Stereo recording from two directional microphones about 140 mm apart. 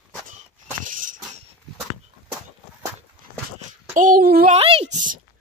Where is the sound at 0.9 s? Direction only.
70° right (ahead or behind).